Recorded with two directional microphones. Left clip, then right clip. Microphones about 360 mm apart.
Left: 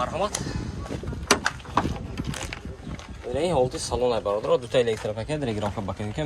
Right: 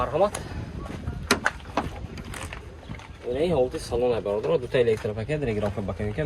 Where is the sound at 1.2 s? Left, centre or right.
Centre.